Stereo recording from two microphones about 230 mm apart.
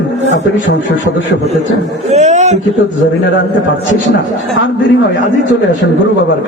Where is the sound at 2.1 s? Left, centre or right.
Right.